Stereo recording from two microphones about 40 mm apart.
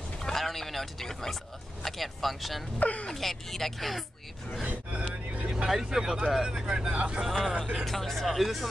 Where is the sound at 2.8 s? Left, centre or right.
Left.